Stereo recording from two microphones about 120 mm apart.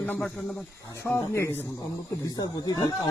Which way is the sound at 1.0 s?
20° left (ahead or behind).